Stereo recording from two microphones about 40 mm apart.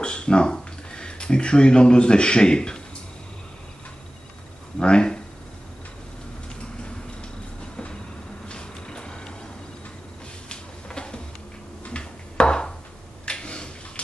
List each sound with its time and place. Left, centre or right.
0.0 s speech: left
4.7 s speech: left
7.7 s train: left
8.5 s vehicle: left
10.5 s a sound: left